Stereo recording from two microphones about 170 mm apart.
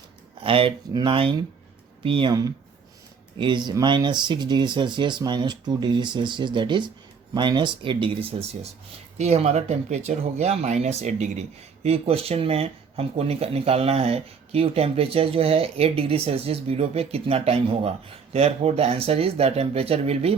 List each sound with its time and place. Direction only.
0.4 s speech: 30° right (ahead or behind)